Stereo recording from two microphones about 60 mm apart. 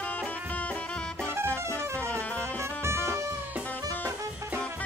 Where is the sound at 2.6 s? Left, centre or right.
Right.